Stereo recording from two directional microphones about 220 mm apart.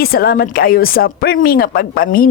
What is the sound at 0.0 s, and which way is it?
A woman's voice, 45° left (ahead or behind).